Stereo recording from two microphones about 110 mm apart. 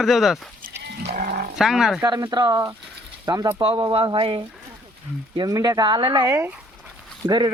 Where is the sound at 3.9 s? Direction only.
50° right (ahead or behind).